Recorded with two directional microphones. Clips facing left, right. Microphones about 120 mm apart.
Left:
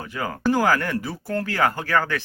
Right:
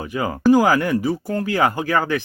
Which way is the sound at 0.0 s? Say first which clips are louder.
Right 6 dB; 15° right (ahead or behind).